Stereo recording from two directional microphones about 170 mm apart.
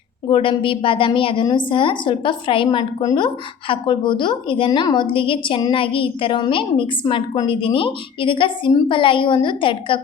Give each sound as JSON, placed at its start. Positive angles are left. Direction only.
{"t": 0.3, "sound": "a woman's voice", "side_deg": 30}